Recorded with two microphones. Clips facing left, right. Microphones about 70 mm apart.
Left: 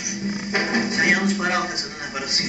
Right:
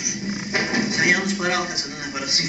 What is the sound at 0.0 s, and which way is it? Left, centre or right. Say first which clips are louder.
Music: left 1 dB; centre.